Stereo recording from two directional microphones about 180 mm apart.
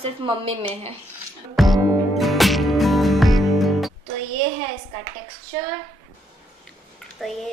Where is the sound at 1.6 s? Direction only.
Centre (ahead or behind).